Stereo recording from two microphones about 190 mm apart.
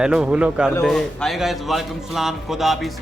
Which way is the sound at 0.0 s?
5° right (ahead or behind).